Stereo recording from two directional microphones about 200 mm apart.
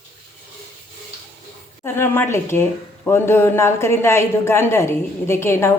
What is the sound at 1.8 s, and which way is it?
Speech, 10° left (ahead or behind).